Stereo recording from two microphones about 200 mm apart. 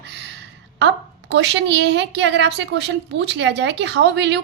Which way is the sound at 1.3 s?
60° right (ahead or behind).